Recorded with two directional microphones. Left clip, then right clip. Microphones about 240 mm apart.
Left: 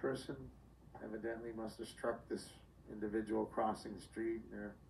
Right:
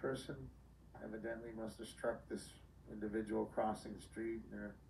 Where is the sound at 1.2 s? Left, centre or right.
Centre.